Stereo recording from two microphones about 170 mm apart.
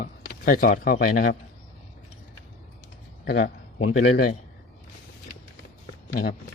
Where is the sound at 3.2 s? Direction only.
70° left (ahead or behind).